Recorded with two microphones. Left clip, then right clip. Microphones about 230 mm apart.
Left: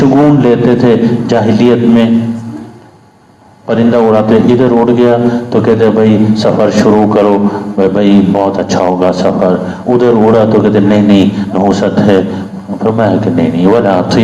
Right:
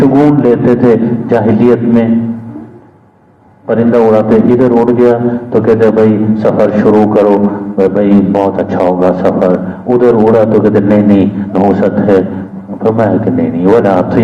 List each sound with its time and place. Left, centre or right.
0.0 s a man's voice: left
3.7 s a man's voice: left